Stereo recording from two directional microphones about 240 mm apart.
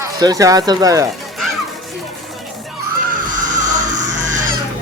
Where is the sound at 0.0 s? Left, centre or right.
Centre.